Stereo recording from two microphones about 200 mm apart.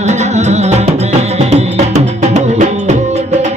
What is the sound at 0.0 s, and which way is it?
Music, 35° right (ahead or behind).